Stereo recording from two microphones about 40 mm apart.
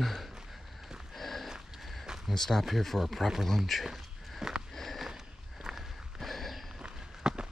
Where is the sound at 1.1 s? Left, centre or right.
Centre.